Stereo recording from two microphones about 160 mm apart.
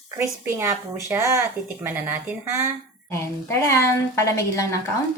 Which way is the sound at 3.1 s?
15° left (ahead or behind).